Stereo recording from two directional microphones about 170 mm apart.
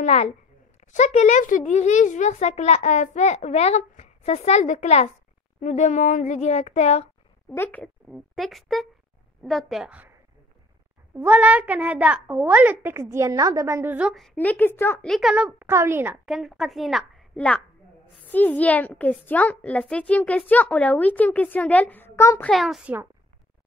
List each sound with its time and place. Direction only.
0.0 s a woman's voice: 40° left (ahead or behind)
7.4 s a woman's voice: 10° left (ahead or behind)
8.1 s a woman's voice: centre (ahead or behind)
11.1 s a child's voice: 10° right (ahead or behind); by 15.0 s 15° left (ahead or behind)
15.0 s a child's voice: centre (ahead or behind)
16.3 s a woman's voice: centre (ahead or behind); by 22.5 s 15° left (ahead or behind)
22.5 s a woman's voice: centre (ahead or behind)